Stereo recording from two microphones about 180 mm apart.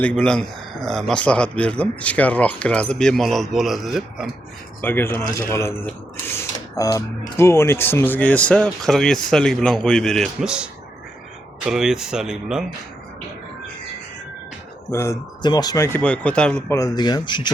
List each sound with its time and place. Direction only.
0.0 s speech: 5° left (ahead or behind)
4.8 s speech: 10° left (ahead or behind); by 12.6 s 5° right (ahead or behind)
14.8 s speech: 15° left (ahead or behind)
16.6 s speech: 20° left (ahead or behind)